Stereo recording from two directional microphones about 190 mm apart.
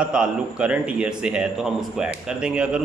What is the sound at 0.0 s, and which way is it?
A man's voice, 5° right (ahead or behind).